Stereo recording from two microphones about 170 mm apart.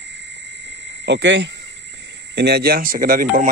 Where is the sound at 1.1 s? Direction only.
90° right.